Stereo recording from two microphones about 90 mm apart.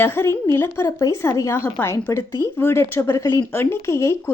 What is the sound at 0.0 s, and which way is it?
A woman's voice, 25° left (ahead or behind).